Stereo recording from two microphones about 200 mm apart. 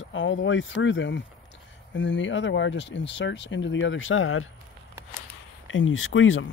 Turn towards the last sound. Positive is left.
turn(degrees=75)  # may be behind; listen again after turning